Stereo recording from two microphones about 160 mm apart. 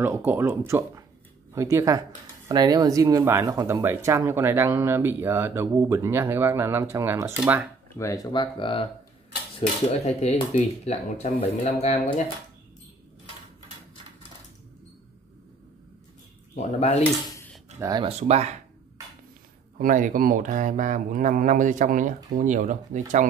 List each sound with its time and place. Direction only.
0.0 s speech: 15° right (ahead or behind)
8.0 s speech: 20° left (ahead or behind); by 12.0 s 45° left (ahead or behind)
16.5 s speech: 45° left (ahead or behind)
17.7 s speech: 20° right (ahead or behind)
18.0 s speech: 45° right (ahead or behind)
19.8 s speech: 55° right (ahead or behind)